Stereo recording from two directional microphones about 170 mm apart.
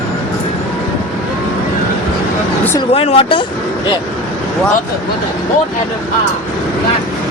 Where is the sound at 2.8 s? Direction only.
35° left (ahead or behind).